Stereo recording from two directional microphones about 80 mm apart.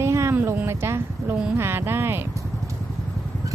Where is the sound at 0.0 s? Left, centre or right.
Right.